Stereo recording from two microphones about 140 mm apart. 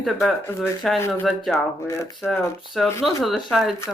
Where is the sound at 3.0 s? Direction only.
Centre (ahead or behind).